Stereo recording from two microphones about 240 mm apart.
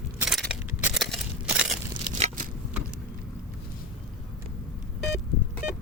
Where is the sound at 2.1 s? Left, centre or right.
Right.